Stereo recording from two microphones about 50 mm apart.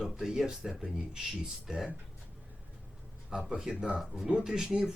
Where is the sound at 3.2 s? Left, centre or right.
Centre.